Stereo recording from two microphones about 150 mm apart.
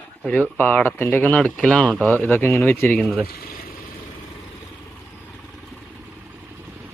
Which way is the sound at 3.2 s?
80° left.